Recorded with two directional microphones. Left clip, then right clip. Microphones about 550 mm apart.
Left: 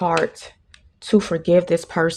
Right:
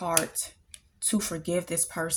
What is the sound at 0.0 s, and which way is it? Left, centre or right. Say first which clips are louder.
Speech: left 9 dB; centre.